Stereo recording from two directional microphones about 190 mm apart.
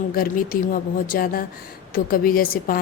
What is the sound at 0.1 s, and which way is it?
Speech, 50° left (ahead or behind).